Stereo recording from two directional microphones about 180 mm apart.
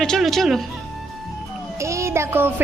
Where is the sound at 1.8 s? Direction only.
15° right (ahead or behind).